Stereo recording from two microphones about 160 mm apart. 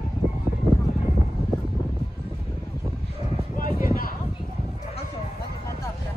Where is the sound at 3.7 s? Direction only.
65° left (ahead or behind).